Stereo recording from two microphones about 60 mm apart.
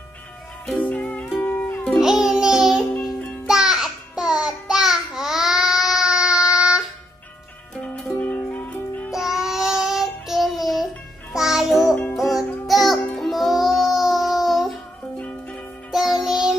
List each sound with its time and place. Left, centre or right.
0.7 s music: left
1.4 s music: left
2.0 s music: centre
8.2 s music: left
9.1 s child singing: centre
11.3 s music: centre
15.9 s music: centre